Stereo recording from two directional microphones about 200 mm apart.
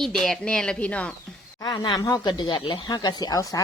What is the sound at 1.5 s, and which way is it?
Speech, 20° left (ahead or behind).